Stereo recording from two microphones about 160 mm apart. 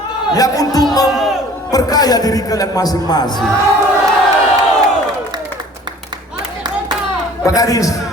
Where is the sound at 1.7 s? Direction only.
25° left (ahead or behind).